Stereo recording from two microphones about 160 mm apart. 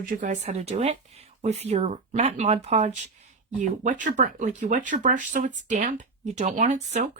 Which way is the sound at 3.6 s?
50° right (ahead or behind).